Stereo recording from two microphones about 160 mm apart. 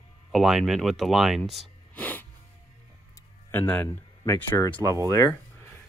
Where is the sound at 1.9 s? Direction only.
10° left (ahead or behind).